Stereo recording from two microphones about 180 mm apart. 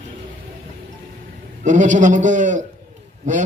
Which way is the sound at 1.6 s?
45° right (ahead or behind).